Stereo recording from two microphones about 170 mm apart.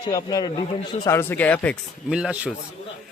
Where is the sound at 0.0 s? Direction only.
25° left (ahead or behind).